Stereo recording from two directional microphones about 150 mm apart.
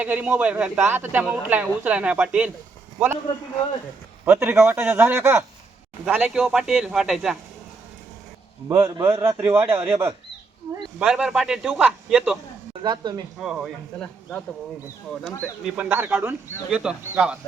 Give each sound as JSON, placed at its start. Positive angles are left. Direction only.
{"t": 0.0, "sound": "speech", "side_deg": -10}
{"t": 4.3, "sound": "a man's voice", "side_deg": -10}
{"t": 8.7, "sound": "speech", "side_deg": -15}
{"t": 9.7, "sound": "speech", "side_deg": -40}
{"t": 11.0, "sound": "a man's voice", "side_deg": -5}
{"t": 12.8, "sound": "speech", "side_deg": -30}
{"t": 13.4, "sound": "a man's voice", "side_deg": -5}
{"t": 15.6, "sound": "speech", "side_deg": -10}